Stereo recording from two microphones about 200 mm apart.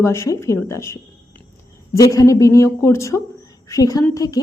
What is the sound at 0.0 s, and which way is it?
A woman's voice, 15° left (ahead or behind).